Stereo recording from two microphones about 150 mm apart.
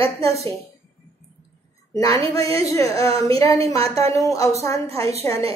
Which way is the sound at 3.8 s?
40° right (ahead or behind).